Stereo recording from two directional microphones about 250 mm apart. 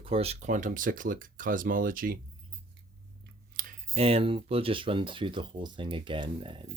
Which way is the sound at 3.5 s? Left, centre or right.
Right.